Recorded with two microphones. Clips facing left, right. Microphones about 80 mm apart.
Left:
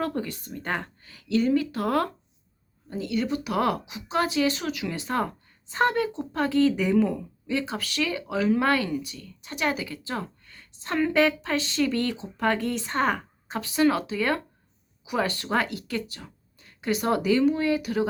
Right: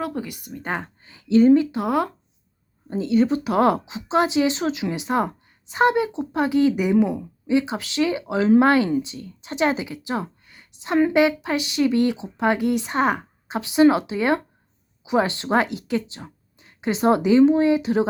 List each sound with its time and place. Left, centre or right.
0.0 s speech: centre
2.9 s speech: right